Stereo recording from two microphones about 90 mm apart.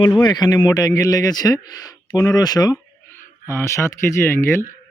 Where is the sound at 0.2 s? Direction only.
50° left (ahead or behind).